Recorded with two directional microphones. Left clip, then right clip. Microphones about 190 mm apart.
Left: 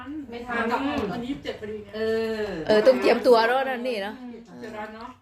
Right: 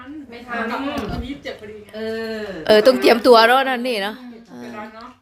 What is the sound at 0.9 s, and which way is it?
Speech, 30° right (ahead or behind).